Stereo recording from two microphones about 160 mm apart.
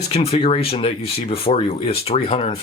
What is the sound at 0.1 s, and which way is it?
Speech, 35° left (ahead or behind).